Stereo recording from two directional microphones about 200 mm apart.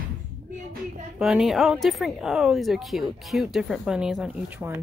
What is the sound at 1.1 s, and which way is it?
Speech, centre (ahead or behind).